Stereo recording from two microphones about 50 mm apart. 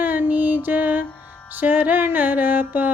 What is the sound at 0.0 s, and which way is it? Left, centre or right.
Music, right.